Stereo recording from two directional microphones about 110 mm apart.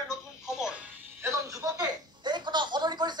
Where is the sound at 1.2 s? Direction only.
30° right (ahead or behind).